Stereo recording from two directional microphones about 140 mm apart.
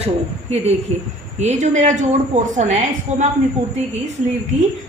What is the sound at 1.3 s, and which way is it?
Speech, 55° right (ahead or behind).